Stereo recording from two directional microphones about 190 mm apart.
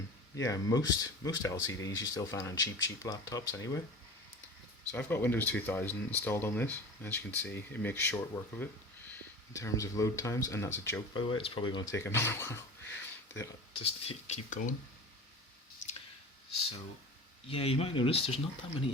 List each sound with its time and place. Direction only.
0.3 s speech: 15° left (ahead or behind)
4.9 s speech: 10° left (ahead or behind)
11.1 s speech: 25° left (ahead or behind)
13.7 s speech: 30° left (ahead or behind)
17.5 s speech: 30° left (ahead or behind)